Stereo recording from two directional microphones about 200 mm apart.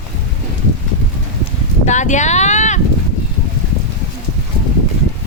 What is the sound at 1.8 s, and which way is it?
Speech, 35° left (ahead or behind).